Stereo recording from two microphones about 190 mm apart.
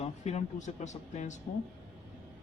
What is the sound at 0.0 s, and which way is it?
Speech, 35° left (ahead or behind).